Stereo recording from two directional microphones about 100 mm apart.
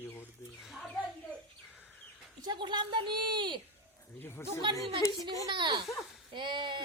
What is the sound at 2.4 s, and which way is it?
A woman's voice, 50° right (ahead or behind).